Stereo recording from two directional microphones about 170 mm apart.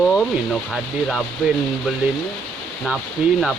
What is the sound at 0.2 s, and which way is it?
Speech, centre (ahead or behind).